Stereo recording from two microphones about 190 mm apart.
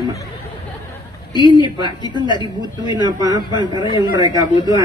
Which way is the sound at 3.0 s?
20° right (ahead or behind).